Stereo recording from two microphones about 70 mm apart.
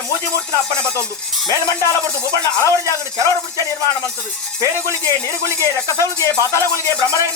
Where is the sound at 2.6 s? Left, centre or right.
Left.